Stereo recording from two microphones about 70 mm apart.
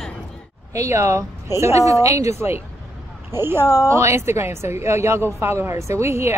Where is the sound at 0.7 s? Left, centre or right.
Right.